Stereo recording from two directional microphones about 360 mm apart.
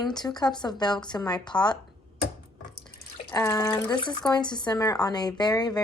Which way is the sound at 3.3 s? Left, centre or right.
Centre.